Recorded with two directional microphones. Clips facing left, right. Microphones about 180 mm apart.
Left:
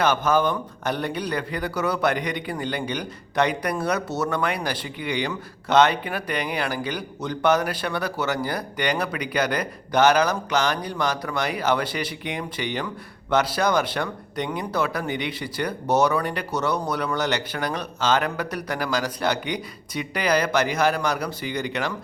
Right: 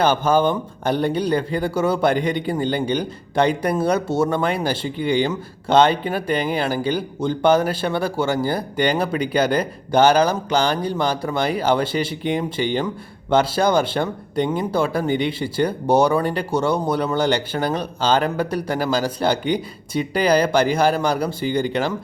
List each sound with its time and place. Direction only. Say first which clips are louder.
0.0 s speech: right 4 dB; 30° right (ahead or behind)